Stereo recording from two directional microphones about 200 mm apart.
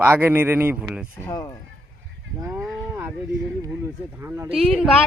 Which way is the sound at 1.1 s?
15° left (ahead or behind).